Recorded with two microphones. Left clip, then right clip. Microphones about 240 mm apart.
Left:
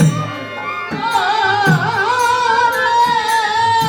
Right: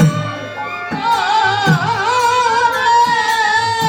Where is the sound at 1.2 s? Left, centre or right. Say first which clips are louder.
Left 2 dB; right.